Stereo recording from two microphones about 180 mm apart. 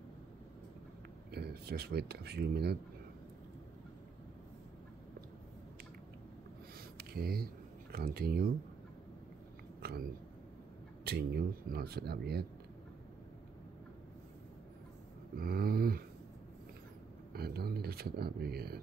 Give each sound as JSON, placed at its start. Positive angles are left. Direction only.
{"t": 1.3, "sound": "speech", "side_deg": -60}
{"t": 7.0, "sound": "a sound", "side_deg": -60}
{"t": 7.9, "sound": "speech", "side_deg": -55}
{"t": 9.8, "sound": "cat", "side_deg": -60}
{"t": 11.1, "sound": "speech", "side_deg": -60}
{"t": 15.3, "sound": "a sound", "side_deg": -55}
{"t": 17.3, "sound": "speech", "side_deg": -60}